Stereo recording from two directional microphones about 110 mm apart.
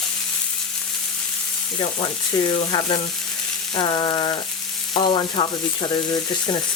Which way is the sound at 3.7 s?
45° left (ahead or behind).